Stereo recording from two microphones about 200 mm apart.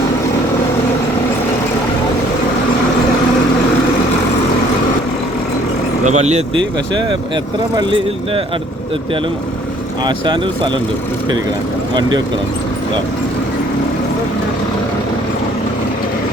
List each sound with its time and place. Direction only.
6.1 s speech: 35° right (ahead or behind)
7.8 s speech: 25° right (ahead or behind)
10.0 s speech: 20° right (ahead or behind)